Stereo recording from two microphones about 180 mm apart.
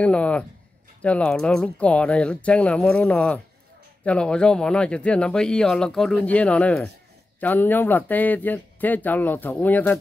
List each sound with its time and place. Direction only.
0.0 s speech: 5° left (ahead or behind)